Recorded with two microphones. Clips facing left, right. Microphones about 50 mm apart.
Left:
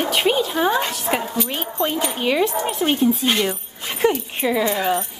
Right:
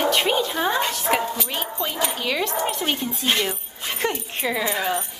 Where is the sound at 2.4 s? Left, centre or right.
Centre.